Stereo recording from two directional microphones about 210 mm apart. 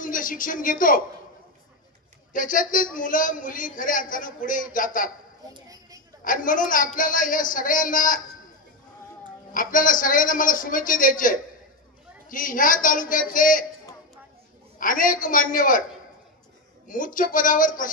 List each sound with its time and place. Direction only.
0.0 s speech: 40° left (ahead or behind)
2.3 s a man's voice: 40° left (ahead or behind)
5.5 s a woman's voice: 15° right (ahead or behind)
6.2 s a man's voice: 40° left (ahead or behind)
9.5 s a man's voice: 40° left (ahead or behind)
14.8 s a man's voice: 40° left (ahead or behind)
16.8 s a man's voice: 40° left (ahead or behind)